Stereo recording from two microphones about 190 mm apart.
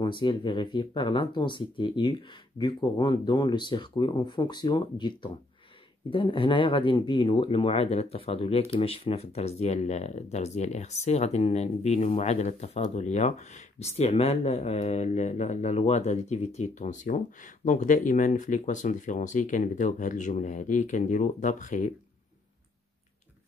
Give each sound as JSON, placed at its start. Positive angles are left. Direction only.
{"t": 0.0, "sound": "speech", "side_deg": 25}